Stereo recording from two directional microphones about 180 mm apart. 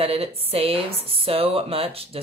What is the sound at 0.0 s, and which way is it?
Speech, 35° right (ahead or behind).